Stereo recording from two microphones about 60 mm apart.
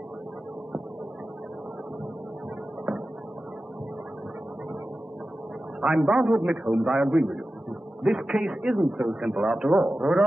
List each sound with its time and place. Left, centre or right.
5.8 s a man's voice: centre
8.6 s speech: centre
9.0 s a man's voice: centre